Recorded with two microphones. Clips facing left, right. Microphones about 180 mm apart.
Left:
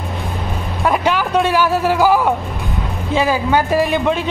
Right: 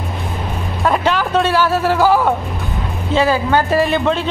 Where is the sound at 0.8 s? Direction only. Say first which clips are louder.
Even; 10° left (ahead or behind).